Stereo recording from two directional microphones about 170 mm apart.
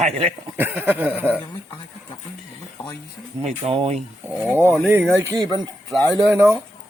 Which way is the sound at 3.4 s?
35° right (ahead or behind).